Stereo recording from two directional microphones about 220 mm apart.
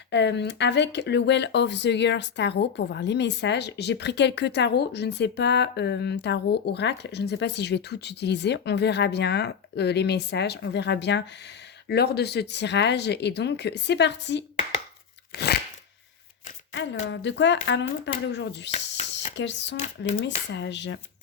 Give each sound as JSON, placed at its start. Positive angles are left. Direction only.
{"t": 0.1, "sound": "speech", "side_deg": 50}
{"t": 15.3, "sound": "crunch", "side_deg": 45}
{"t": 16.7, "sound": "speech", "side_deg": 55}